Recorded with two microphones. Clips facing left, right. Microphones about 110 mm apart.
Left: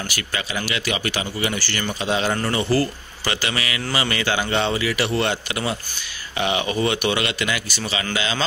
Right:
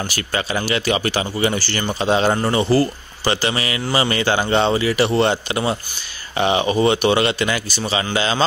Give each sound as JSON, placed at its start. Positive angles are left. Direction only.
{"t": 0.1, "sound": "a man's voice", "side_deg": -35}